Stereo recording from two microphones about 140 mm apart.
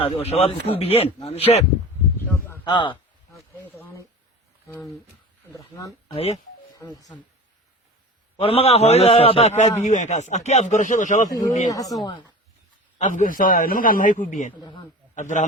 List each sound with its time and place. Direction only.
0.0 s a man's voice: 50° left (ahead or behind)
2.6 s a man's voice: 35° left (ahead or behind)
3.6 s a sound: 15° left (ahead or behind)
6.7 s speech: 25° left (ahead or behind)
8.4 s a man's voice: 45° left (ahead or behind); by 11.3 s 60° left (ahead or behind)
11.7 s speech: 25° left (ahead or behind)
13.0 s a man's voice: 65° left (ahead or behind)
14.6 s a man's voice: 35° left (ahead or behind)
15.1 s a man's voice: 60° left (ahead or behind)